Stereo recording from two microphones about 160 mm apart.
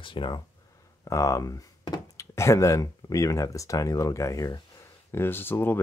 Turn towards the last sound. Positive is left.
turn(degrees=15)  # may be behind; listen again after turning